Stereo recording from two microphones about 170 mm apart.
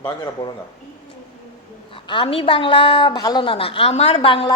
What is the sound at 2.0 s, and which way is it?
A woman's voice, 30° left (ahead or behind).